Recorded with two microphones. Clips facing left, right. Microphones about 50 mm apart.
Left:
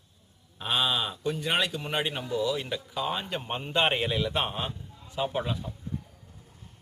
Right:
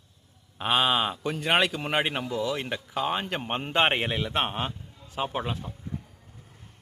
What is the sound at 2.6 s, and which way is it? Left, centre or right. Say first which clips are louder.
Speech: right 2 dB; right.